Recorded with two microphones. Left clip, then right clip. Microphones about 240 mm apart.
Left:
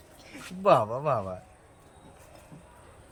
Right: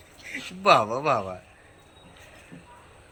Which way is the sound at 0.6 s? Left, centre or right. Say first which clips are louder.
Right 3 dB; left.